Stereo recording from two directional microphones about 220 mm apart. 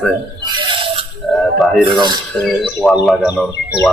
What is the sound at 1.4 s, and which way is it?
Music, centre (ahead or behind).